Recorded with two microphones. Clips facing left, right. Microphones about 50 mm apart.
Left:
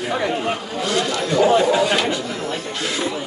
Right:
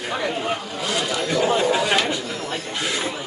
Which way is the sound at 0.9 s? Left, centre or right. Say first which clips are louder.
Left 3 dB; centre.